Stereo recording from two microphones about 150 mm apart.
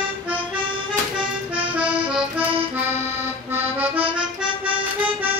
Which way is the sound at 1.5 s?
10° right (ahead or behind).